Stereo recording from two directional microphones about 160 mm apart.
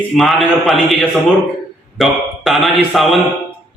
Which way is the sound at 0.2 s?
Centre (ahead or behind).